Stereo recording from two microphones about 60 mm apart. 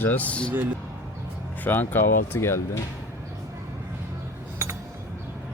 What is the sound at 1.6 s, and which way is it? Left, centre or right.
Speech, left.